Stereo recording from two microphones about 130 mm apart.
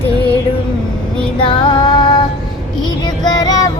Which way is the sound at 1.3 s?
40° left (ahead or behind).